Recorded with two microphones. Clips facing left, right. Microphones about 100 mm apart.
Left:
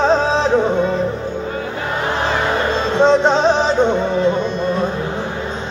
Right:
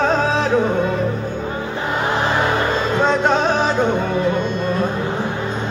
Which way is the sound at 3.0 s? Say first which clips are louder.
Left 5 dB; 25° left (ahead or behind).